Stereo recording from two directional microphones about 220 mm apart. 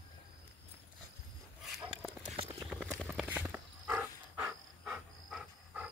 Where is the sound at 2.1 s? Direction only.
25° right (ahead or behind).